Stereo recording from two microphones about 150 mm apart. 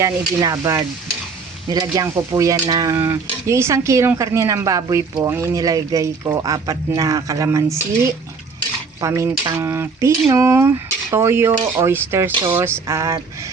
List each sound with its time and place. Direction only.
0.0 s speech: 20° right (ahead or behind)